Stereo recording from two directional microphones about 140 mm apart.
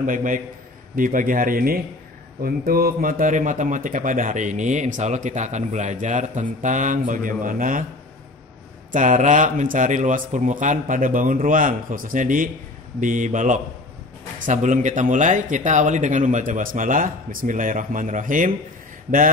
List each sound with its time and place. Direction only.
0.0 s a man's voice: 70° right (ahead or behind)
8.9 s a man's voice: 65° right (ahead or behind)